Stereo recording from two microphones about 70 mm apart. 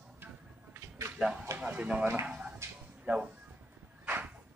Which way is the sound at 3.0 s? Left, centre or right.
Centre.